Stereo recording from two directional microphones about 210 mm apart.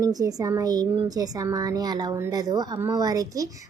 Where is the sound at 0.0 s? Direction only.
15° right (ahead or behind).